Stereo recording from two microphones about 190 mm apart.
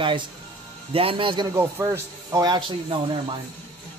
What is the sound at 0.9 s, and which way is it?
Speech, 30° right (ahead or behind).